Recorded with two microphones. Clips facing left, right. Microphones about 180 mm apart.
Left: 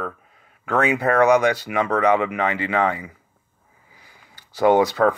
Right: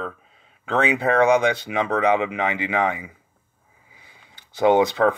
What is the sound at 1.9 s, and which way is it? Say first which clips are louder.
Speech: left 1 dB; 15° right (ahead or behind).